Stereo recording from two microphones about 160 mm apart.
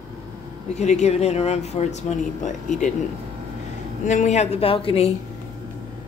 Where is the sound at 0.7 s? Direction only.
45° left (ahead or behind).